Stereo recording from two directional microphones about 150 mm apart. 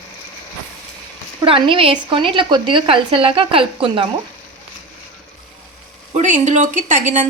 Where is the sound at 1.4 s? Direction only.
35° right (ahead or behind).